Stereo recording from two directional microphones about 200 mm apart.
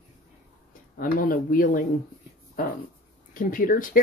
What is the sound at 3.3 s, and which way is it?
Speech, 45° left (ahead or behind).